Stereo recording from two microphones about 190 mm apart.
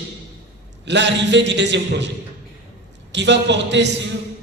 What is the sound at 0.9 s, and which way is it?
A man's voice, 65° right (ahead or behind).